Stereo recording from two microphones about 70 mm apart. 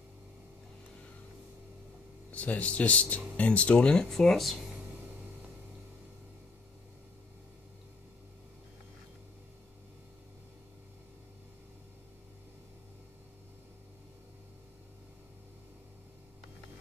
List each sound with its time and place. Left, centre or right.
2.3 s speech: left; by 4.6 s centre